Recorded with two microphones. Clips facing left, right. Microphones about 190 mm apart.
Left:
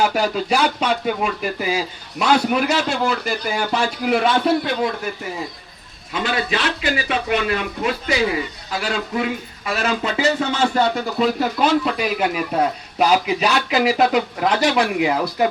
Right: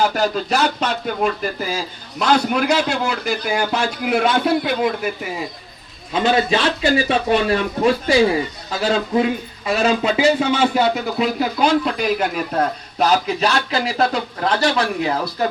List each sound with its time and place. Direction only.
0.0 s speech: 10° left (ahead or behind)
6.1 s a man's voice: 25° right (ahead or behind); by 15.4 s 15° left (ahead or behind)